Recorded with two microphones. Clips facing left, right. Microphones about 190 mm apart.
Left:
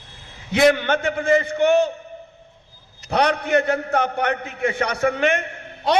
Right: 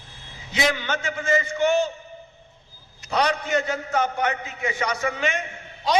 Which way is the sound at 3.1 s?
60° left (ahead or behind).